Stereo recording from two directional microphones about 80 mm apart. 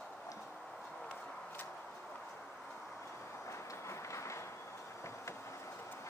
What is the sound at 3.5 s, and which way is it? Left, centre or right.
Train, left.